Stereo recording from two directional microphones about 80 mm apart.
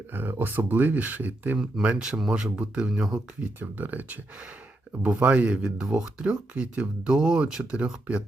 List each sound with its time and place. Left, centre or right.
0.1 s speech: right
1.5 s speech: centre
3.4 s speech: right